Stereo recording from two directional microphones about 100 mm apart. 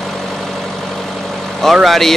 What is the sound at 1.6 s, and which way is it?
Speech, centre (ahead or behind).